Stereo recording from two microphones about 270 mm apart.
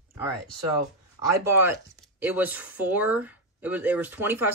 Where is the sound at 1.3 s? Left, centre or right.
Centre.